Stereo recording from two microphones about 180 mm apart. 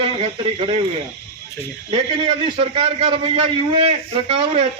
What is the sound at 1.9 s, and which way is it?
A man's voice, 30° right (ahead or behind).